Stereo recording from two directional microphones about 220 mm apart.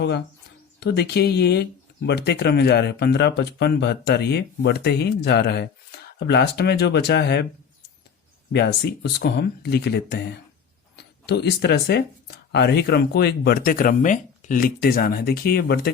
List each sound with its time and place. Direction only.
0.8 s speech: 50° left (ahead or behind)
8.5 s speech: 50° left (ahead or behind)